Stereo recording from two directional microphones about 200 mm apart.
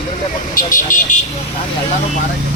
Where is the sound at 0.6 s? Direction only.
40° left (ahead or behind).